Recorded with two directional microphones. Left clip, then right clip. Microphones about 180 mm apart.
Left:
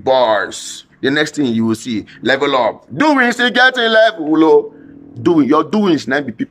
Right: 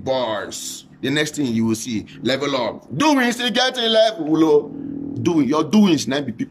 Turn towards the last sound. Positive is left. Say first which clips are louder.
# left 5 dB
turn(degrees=-20)  # may be behind; listen again after turning